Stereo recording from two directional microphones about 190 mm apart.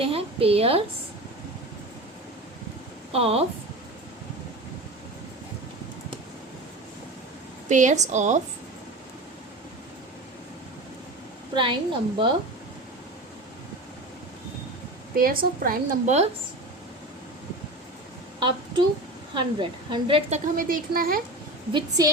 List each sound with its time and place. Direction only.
0.0 s a woman's voice: 30° right (ahead or behind)
3.1 s a woman's voice: 30° right (ahead or behind)
7.7 s a woman's voice: 40° right (ahead or behind)
11.5 s a woman's voice: 25° right (ahead or behind)
15.1 s a woman's voice: 50° right (ahead or behind)
18.3 s a sound: 25° right (ahead or behind)
19.3 s a woman's voice: 25° right (ahead or behind)
20.4 s a woman's voice: 45° right (ahead or behind)
21.7 s a woman's voice: 20° right (ahead or behind)